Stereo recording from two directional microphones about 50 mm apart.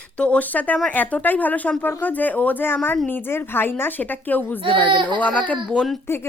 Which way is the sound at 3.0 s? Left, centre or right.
Left.